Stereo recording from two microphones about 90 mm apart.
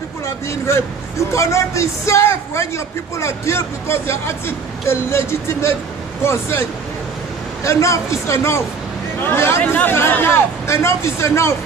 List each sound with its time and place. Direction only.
0.5 s speech: 30° left (ahead or behind)
7.6 s speech: 35° left (ahead or behind)